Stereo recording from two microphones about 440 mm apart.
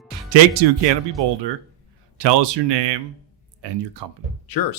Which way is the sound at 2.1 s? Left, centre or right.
Right.